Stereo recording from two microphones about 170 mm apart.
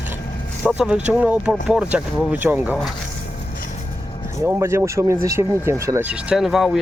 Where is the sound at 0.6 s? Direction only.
5° right (ahead or behind).